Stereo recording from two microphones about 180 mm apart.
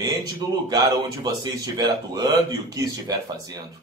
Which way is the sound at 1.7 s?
20° right (ahead or behind).